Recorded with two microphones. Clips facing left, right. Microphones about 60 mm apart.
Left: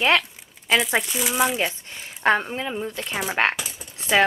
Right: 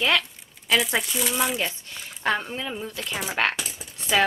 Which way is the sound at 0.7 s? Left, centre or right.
Centre.